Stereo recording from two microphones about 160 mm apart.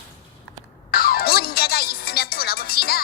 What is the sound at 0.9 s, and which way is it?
Music, 70° left (ahead or behind).